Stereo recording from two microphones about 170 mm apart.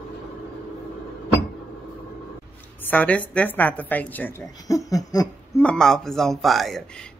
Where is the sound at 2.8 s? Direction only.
10° left (ahead or behind).